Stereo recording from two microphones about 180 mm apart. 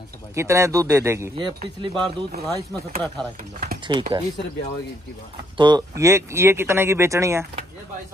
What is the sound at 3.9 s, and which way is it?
Speech, 25° right (ahead or behind).